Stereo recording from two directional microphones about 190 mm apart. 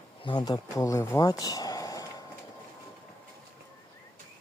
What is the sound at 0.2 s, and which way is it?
Speech, 25° left (ahead or behind).